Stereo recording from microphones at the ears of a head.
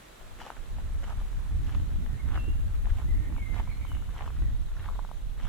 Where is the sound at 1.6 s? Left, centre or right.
Right.